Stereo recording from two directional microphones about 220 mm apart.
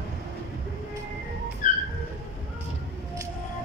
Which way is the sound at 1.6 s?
35° left (ahead or behind).